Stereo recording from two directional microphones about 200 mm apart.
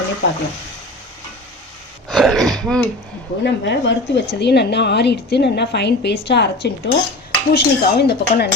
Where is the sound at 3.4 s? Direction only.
60° left (ahead or behind).